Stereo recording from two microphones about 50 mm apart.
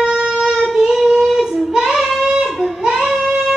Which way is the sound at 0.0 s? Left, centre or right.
Centre.